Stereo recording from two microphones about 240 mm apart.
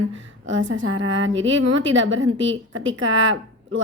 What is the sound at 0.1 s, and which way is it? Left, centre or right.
Speech, right.